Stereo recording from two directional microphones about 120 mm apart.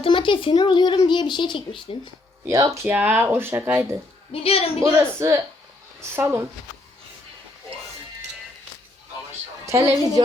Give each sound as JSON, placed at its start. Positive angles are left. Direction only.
{"t": 0.0, "sound": "a child's voice", "side_deg": 45}
{"t": 2.5, "sound": "speech", "side_deg": -25}
{"t": 2.9, "sound": "speech", "side_deg": -15}
{"t": 4.3, "sound": "a woman's voice", "side_deg": 55}
{"t": 4.8, "sound": "speech", "side_deg": -25}
{"t": 9.6, "sound": "a woman's voice", "side_deg": -25}